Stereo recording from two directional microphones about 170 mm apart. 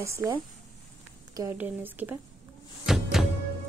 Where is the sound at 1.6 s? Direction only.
10° right (ahead or behind).